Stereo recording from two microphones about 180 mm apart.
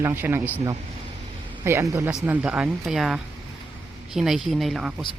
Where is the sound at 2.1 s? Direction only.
5° right (ahead or behind).